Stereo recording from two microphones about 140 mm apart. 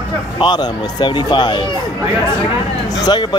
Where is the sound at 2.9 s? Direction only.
30° left (ahead or behind).